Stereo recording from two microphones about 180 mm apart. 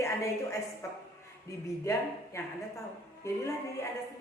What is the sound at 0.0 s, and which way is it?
A woman's voice, 15° left (ahead or behind).